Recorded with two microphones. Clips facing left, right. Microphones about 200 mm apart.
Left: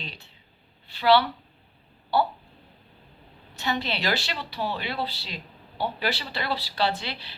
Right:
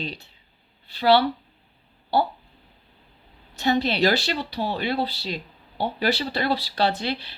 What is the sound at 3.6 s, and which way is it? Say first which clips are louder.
Speech: right 8 dB; 40° right (ahead or behind).